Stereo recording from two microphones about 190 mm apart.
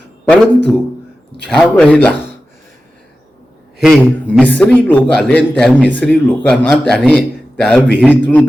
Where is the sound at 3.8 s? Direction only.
Centre (ahead or behind).